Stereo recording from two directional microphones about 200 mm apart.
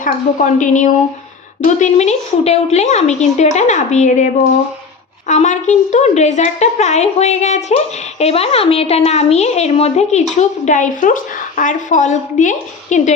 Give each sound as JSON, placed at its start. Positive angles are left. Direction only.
{"t": 0.0, "sound": "a woman's voice", "side_deg": 40}
{"t": 5.3, "sound": "a woman's voice", "side_deg": 35}